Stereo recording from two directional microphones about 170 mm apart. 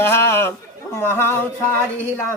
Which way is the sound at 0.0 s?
15° left (ahead or behind).